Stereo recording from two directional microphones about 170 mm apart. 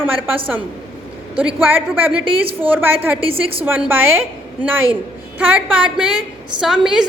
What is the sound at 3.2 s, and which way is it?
Speech, 35° right (ahead or behind).